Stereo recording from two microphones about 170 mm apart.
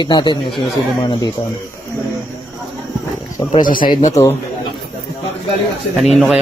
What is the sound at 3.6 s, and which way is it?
Speech, 55° left (ahead or behind).